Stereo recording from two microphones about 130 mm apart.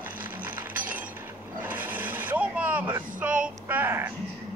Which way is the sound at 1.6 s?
15° right (ahead or behind).